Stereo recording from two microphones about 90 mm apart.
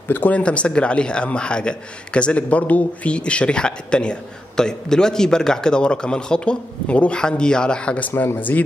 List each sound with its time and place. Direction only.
0.1 s a man's voice: 15° left (ahead or behind)
8.1 s speech: 25° left (ahead or behind)